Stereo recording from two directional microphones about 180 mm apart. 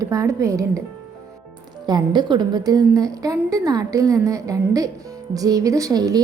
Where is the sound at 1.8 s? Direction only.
25° right (ahead or behind).